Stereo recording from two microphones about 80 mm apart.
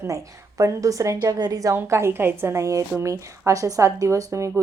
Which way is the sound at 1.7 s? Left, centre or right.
Right.